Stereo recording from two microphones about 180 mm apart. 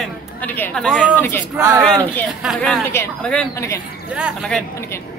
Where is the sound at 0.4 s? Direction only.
10° left (ahead or behind).